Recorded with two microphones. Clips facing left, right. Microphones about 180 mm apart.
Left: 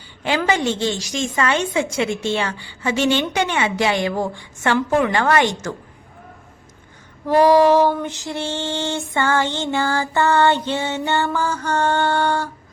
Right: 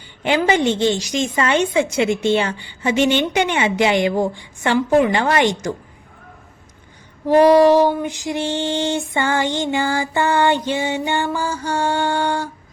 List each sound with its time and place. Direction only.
0.3 s a woman's voice: 20° right (ahead or behind)
7.3 s female singing: 15° right (ahead or behind)